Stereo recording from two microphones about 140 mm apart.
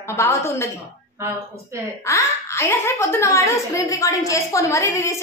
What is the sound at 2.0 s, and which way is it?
A woman's voice, 20° left (ahead or behind).